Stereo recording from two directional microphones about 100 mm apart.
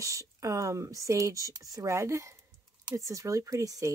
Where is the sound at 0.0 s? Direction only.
35° right (ahead or behind).